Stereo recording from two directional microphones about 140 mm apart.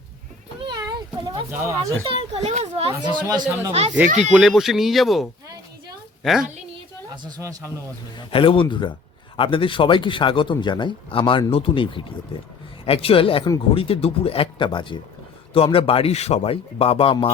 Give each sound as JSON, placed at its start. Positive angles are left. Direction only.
{"t": 0.7, "sound": "a sound", "side_deg": -25}
{"t": 2.0, "sound": "a child's voice", "side_deg": -50}
{"t": 3.0, "sound": "speech", "side_deg": -30}
{"t": 3.7, "sound": "a child's voice", "side_deg": -45}
{"t": 4.2, "sound": "speech", "side_deg": -5}
{"t": 7.2, "sound": "speech", "side_deg": -30}
{"t": 8.3, "sound": "a man's voice", "side_deg": 40}